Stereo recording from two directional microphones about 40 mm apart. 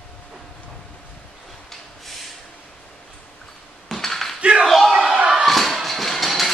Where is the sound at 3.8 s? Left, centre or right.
Centre.